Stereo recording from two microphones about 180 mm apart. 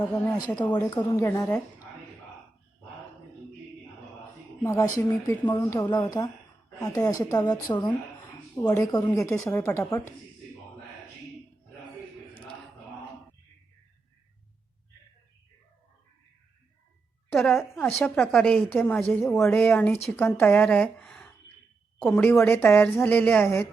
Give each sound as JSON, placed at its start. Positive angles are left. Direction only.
{"t": 0.9, "sound": "a woman's voice", "side_deg": 20}
{"t": 4.6, "sound": "a woman's voice", "side_deg": 15}
{"t": 17.3, "sound": "a woman's voice", "side_deg": 0}